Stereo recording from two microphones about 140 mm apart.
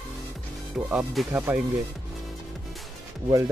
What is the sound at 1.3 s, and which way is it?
Speech, 15° right (ahead or behind).